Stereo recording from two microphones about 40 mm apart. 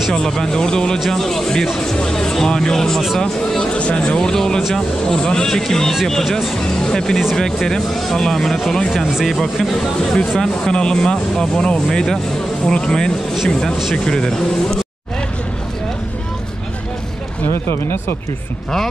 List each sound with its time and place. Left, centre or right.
0.1 s speech: centre
3.7 s speech: left
4.2 s speech: centre
10.4 s speech: centre